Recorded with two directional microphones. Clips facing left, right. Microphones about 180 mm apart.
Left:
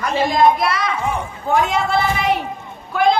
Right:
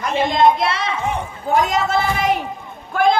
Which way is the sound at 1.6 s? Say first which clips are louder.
Even; 40° right (ahead or behind).